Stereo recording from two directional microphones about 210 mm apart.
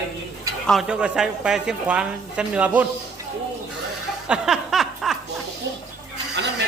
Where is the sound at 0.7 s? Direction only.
5° right (ahead or behind).